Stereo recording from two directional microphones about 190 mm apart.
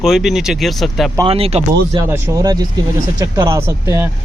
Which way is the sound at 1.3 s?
30° right (ahead or behind).